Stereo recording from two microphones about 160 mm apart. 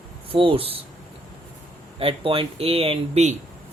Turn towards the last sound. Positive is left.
turn(degrees=-45)  # may be behind; listen again after turning